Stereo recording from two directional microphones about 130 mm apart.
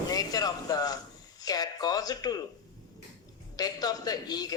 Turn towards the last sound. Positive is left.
turn(degrees=30)  # may be behind; listen again after turning